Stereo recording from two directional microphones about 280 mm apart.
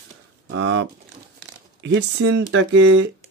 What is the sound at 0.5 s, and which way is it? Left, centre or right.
Speech, right.